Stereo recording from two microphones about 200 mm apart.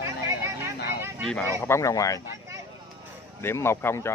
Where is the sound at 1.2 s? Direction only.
5° left (ahead or behind).